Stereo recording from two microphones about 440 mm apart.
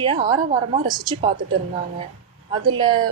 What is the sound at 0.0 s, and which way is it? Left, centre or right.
A woman's voice, centre.